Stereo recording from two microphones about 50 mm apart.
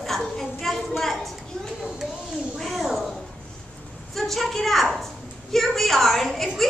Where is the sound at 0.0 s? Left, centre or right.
Centre.